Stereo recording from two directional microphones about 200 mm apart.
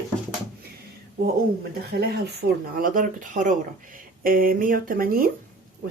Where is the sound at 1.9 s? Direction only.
55° right (ahead or behind).